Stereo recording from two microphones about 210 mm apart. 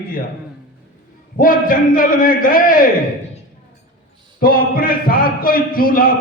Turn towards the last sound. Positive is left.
turn(degrees=45)  # may be behind; listen again after turning